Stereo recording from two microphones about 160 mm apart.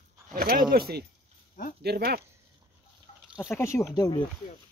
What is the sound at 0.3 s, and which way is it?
Speech, 65° right (ahead or behind).